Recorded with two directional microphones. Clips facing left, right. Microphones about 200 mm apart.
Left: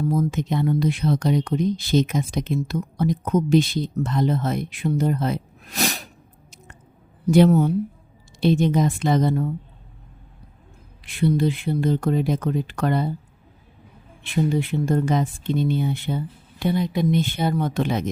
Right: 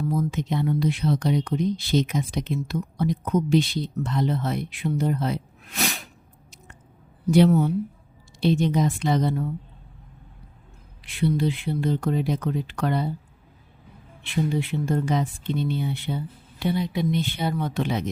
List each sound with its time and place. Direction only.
0.1 s speech: 45° left (ahead or behind)
7.3 s speech: 45° left (ahead or behind)
11.0 s speech: 45° left (ahead or behind)
14.5 s speech: 45° left (ahead or behind)